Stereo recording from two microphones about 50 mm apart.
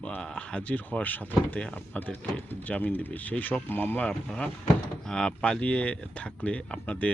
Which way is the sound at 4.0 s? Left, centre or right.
Left.